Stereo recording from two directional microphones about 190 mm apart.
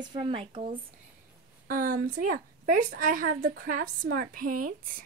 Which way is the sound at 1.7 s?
45° right (ahead or behind).